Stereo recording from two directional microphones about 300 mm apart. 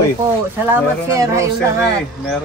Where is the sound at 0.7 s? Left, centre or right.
Centre.